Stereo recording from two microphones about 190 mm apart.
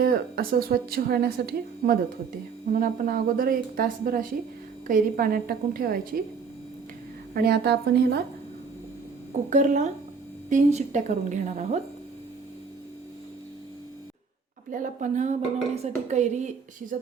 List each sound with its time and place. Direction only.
0.0 s a woman's voice: 55° right (ahead or behind)
7.3 s a woman's voice: 55° right (ahead or behind)
9.5 s a woman's voice: 40° right (ahead or behind)
14.7 s a woman's voice: 45° right (ahead or behind)